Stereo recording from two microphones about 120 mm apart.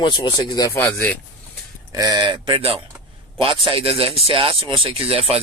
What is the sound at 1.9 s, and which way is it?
Speech, 35° right (ahead or behind).